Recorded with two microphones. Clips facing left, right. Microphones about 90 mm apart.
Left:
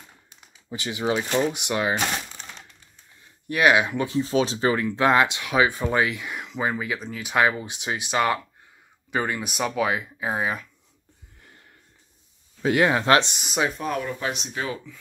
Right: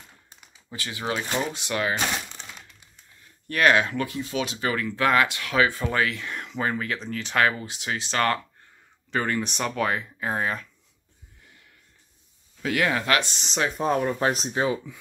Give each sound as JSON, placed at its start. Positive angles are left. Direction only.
{"t": 0.7, "sound": "speech", "side_deg": 20}
{"t": 3.4, "sound": "speech", "side_deg": 15}
{"t": 12.6, "sound": "speech", "side_deg": 25}
{"t": 13.3, "sound": "speech", "side_deg": 10}
{"t": 13.7, "sound": "speech", "side_deg": -35}